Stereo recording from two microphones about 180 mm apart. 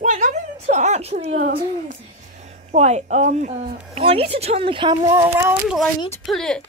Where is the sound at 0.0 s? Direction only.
40° right (ahead or behind).